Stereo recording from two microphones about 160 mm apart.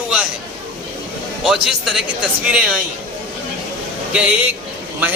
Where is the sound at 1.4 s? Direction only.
Centre (ahead or behind).